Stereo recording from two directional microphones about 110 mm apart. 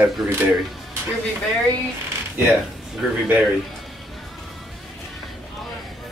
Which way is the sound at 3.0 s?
5° right (ahead or behind).